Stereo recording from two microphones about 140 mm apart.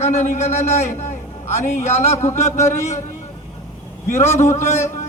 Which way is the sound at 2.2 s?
55° left (ahead or behind).